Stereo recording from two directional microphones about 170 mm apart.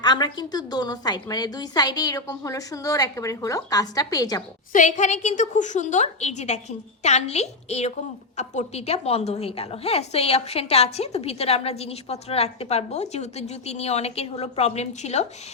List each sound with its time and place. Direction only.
0.0 s a woman's voice: 25° left (ahead or behind)
4.7 s a woman's voice: 45° left (ahead or behind)